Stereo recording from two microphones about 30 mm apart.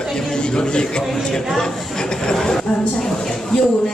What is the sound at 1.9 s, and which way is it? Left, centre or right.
Speech, left.